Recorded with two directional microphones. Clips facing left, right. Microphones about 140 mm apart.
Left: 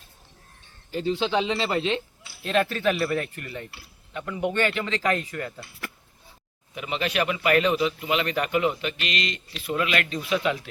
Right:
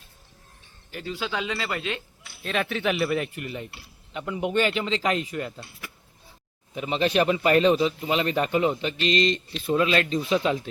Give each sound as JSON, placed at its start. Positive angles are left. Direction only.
{"t": 0.9, "sound": "speech", "side_deg": 25}
{"t": 2.2, "sound": "speech", "side_deg": 0}
{"t": 6.7, "sound": "speech", "side_deg": -30}